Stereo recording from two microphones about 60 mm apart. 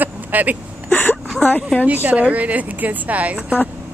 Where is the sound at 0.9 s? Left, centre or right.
Left.